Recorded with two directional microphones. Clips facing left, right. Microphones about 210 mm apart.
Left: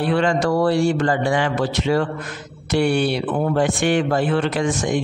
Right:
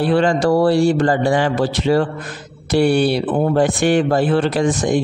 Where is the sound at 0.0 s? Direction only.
35° right (ahead or behind).